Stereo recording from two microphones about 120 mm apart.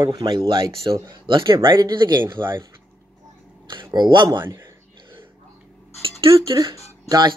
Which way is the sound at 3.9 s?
40° right (ahead or behind).